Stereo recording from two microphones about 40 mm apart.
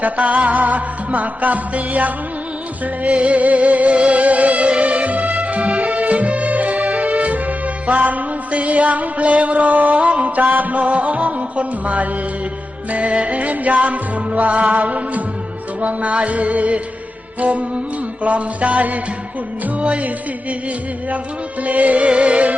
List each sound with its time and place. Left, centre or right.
0.0 s music: right
21.6 s music: right